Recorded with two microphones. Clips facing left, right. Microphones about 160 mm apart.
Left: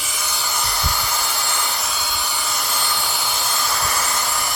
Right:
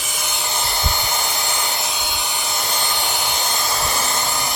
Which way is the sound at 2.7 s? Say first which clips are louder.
Right 3 dB; 20° right (ahead or behind).